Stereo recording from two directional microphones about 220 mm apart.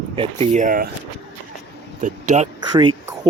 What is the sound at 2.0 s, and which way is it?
Speech, 35° right (ahead or behind).